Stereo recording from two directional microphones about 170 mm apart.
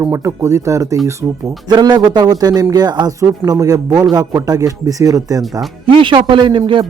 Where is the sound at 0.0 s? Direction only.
15° right (ahead or behind).